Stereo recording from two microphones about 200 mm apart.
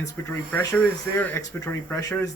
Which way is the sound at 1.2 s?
10° left (ahead or behind).